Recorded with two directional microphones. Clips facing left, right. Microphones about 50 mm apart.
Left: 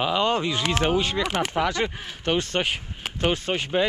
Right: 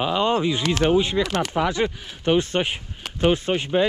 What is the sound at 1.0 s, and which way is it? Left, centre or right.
Speech, centre.